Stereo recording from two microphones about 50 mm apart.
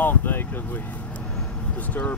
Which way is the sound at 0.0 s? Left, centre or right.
Left.